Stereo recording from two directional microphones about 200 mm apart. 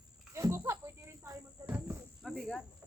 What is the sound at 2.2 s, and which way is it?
Speech, centre (ahead or behind).